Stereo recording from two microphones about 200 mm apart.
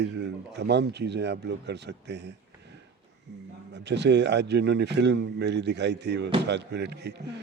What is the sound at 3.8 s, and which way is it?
A man's voice, 60° right (ahead or behind).